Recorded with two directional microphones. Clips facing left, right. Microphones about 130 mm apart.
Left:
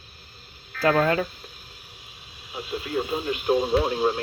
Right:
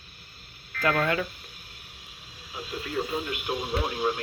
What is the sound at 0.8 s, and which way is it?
Speech, 30° left (ahead or behind).